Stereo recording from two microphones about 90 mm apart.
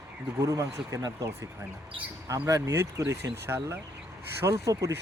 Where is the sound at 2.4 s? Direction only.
30° right (ahead or behind).